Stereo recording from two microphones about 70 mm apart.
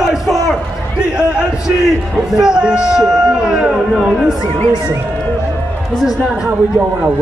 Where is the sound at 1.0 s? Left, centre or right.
Centre.